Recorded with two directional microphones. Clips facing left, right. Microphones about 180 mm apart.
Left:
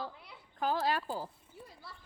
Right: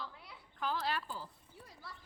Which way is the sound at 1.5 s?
Centre (ahead or behind).